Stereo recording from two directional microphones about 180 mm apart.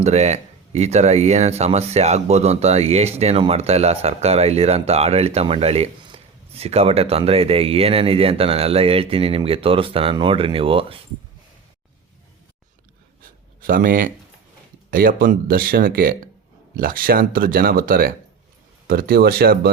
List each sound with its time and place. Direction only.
0.0 s speech: 40° right (ahead or behind)
13.2 s a sound: 50° right (ahead or behind)
14.8 s speech: 55° right (ahead or behind)